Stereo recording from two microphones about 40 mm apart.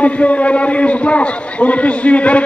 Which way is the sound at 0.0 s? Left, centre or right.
Left.